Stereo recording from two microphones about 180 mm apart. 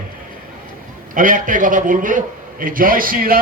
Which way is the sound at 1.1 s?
45° right (ahead or behind).